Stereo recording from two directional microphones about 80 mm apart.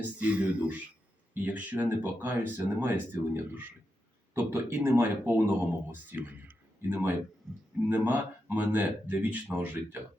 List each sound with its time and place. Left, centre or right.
0.2 s speech: centre